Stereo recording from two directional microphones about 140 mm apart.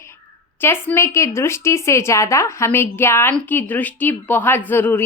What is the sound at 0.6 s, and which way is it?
A woman's voice, 15° left (ahead or behind).